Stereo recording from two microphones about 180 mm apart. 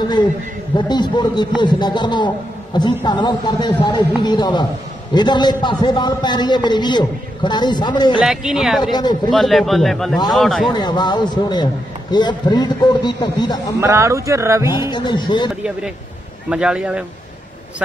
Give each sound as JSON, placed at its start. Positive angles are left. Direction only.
{"t": 0.7, "sound": "a man's voice", "side_deg": 25}
{"t": 8.2, "sound": "a man's voice", "side_deg": 0}
{"t": 8.9, "sound": "a man's voice", "side_deg": 25}
{"t": 9.3, "sound": "a man's voice", "side_deg": 0}
{"t": 10.7, "sound": "a man's voice", "side_deg": 25}
{"t": 13.7, "sound": "speech", "side_deg": -15}
{"t": 14.7, "sound": "a man's voice", "side_deg": 25}
{"t": 16.4, "sound": "a man's voice", "side_deg": -5}